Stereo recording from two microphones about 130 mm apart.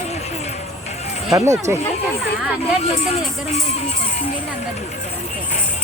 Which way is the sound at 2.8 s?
55° left (ahead or behind).